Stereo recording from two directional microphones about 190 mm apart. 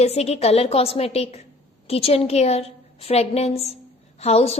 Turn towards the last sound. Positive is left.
turn(degrees=35)  # may be behind; listen again after turning